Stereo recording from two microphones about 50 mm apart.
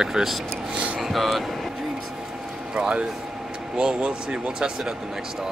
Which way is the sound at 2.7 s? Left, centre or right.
Centre.